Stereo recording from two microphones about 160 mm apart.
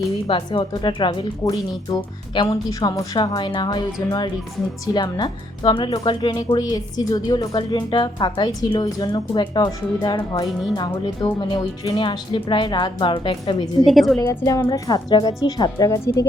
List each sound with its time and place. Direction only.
0.3 s speech: 30° left (ahead or behind)
4.9 s speech: 25° left (ahead or behind)
13.8 s a woman's voice: centre (ahead or behind)
14.2 s speech: 20° left (ahead or behind)